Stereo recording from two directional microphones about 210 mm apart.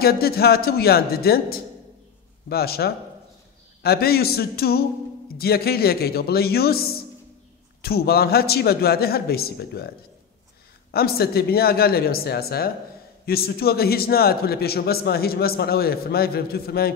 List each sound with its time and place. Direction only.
0.0 s a man's voice: 45° left (ahead or behind)
10.9 s a man's voice: 45° left (ahead or behind)